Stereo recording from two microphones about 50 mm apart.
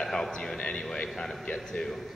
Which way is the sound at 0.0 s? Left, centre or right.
Centre.